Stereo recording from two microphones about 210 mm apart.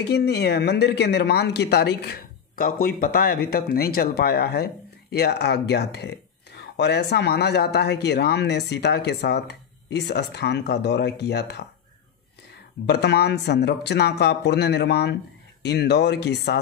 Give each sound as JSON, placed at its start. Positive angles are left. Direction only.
{"t": 0.0, "sound": "speech", "side_deg": 50}
{"t": 12.8, "sound": "speech", "side_deg": 50}